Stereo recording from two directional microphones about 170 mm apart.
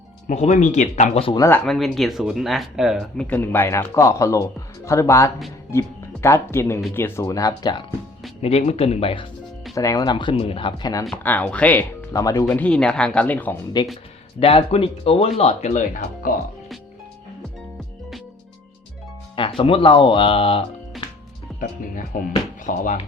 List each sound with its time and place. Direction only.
0.3 s speech: 45° left (ahead or behind)
1.4 s speech: 15° left (ahead or behind)
1.6 s speech: centre (ahead or behind); by 7.9 s 25° left (ahead or behind)
8.4 s speech: 35° left (ahead or behind)
9.7 s speech: 20° left (ahead or behind)
11.0 s speech: 10° left (ahead or behind)
12.5 s speech: 5° left (ahead or behind)
14.3 s speech: 35° left (ahead or behind)
19.4 s speech: 30° left (ahead or behind)
21.6 s speech: 55° left (ahead or behind)